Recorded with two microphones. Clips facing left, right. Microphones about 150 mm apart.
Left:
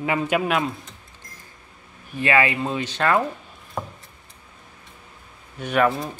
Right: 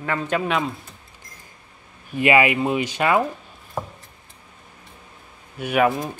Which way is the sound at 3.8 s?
Centre (ahead or behind).